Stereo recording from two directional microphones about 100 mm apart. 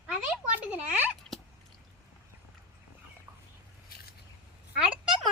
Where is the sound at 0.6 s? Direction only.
15° right (ahead or behind).